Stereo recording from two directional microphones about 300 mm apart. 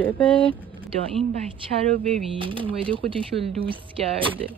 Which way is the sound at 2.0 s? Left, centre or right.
Centre.